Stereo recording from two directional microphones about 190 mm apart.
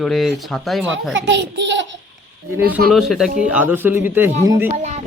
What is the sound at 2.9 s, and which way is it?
A man's voice, centre (ahead or behind).